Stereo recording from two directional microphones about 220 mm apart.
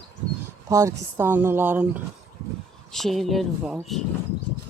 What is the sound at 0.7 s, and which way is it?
Speech, 15° right (ahead or behind).